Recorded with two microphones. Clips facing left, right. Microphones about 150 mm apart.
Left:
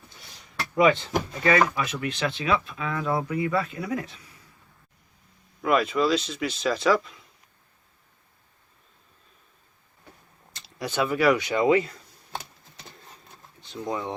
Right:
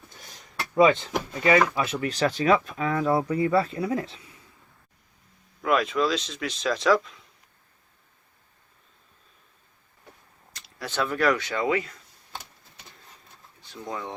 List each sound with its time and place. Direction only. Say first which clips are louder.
1.5 s speech: right 2 dB; 25° right (ahead or behind)
5.6 s speech: left 1 dB; centre (ahead or behind)
10.5 s speech: left 3 dB; 15° left (ahead or behind)
13.6 s speech: left 4 dB; 20° left (ahead or behind)